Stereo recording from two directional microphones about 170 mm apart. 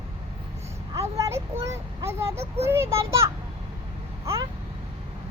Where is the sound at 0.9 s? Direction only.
15° right (ahead or behind).